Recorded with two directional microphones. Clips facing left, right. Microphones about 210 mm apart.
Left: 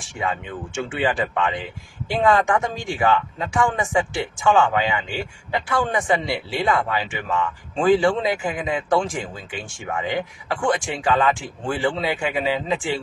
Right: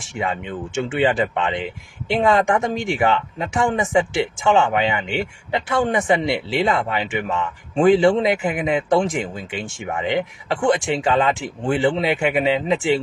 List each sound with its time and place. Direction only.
0.2 s speech: 25° right (ahead or behind)